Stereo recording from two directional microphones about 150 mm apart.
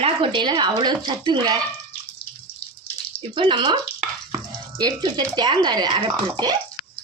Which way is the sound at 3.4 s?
30° right (ahead or behind).